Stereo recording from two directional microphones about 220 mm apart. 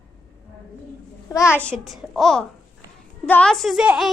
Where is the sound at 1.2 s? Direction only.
15° left (ahead or behind).